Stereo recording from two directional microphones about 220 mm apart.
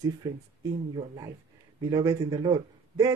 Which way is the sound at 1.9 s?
15° right (ahead or behind).